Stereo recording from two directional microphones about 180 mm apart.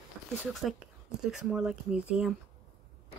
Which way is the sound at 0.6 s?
Centre (ahead or behind).